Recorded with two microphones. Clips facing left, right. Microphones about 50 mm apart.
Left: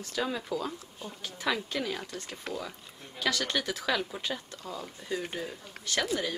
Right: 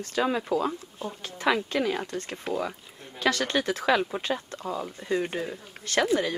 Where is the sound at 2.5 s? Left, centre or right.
Centre.